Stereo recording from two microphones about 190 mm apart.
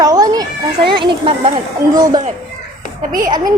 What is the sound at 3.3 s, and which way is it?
Speech, 20° right (ahead or behind).